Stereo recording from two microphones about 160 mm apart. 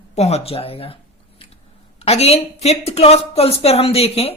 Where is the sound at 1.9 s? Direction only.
40° left (ahead or behind).